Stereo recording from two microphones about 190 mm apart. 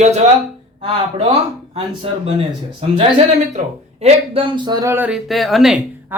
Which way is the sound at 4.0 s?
25° right (ahead or behind).